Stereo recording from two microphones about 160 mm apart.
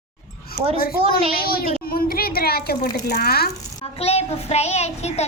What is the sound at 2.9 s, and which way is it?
Speech, 85° left.